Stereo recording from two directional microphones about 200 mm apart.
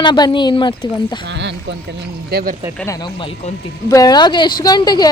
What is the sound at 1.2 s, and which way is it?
Speech, 60° right (ahead or behind).